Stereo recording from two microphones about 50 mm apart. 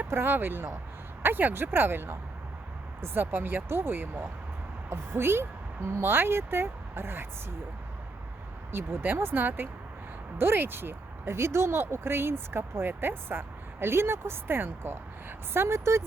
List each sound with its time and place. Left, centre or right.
0.0 s speech: right
8.7 s speech: right
15.5 s speech: right